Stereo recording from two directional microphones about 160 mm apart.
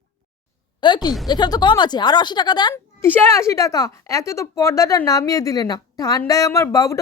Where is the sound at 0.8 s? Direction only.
25° left (ahead or behind).